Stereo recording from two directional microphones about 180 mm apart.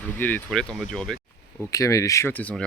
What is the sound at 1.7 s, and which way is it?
Speech, 20° left (ahead or behind).